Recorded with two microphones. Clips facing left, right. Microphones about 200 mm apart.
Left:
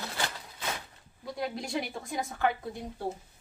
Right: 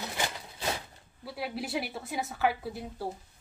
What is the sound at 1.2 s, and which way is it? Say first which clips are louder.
A woman's voice: left 1 dB; 5° right (ahead or behind).